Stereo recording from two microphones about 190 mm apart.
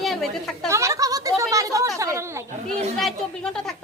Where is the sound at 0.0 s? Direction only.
Centre (ahead or behind).